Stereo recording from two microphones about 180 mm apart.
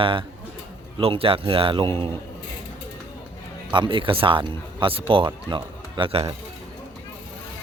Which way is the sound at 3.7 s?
25° right (ahead or behind).